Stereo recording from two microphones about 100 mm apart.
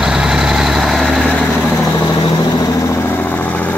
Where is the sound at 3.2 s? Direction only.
15° left (ahead or behind).